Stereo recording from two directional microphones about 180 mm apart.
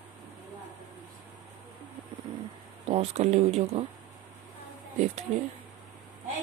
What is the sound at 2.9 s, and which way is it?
Speech, 35° right (ahead or behind).